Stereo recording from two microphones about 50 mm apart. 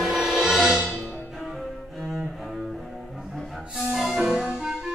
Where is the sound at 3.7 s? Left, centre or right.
Centre.